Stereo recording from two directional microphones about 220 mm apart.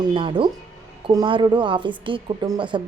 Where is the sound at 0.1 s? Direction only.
20° right (ahead or behind).